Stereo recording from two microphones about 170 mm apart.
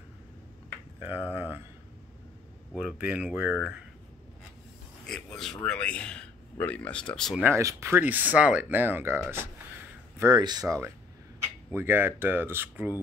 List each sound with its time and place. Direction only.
0.9 s speech: 10° right (ahead or behind)
2.7 s a man's voice: 5° right (ahead or behind)
5.0 s a man's voice: 5° left (ahead or behind)
7.4 s speech: 15° right (ahead or behind)